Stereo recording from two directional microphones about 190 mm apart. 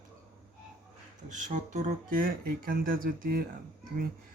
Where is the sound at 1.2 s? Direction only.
40° right (ahead or behind).